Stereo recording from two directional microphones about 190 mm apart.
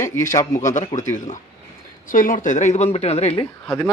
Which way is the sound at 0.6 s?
40° left (ahead or behind).